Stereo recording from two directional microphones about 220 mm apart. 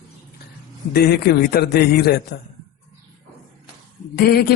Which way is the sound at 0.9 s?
45° left (ahead or behind).